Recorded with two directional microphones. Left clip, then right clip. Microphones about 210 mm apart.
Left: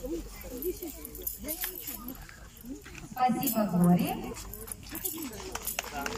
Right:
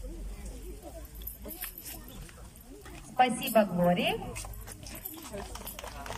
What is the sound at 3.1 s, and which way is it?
Speech, 45° right (ahead or behind).